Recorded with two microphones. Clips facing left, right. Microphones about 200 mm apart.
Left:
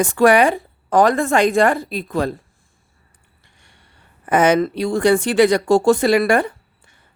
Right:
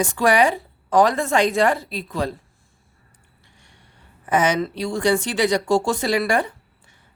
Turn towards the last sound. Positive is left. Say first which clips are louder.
# left 5 dB
turn(degrees=55)  # may be behind; listen again after turning